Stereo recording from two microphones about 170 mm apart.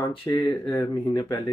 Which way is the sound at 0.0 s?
30° left (ahead or behind).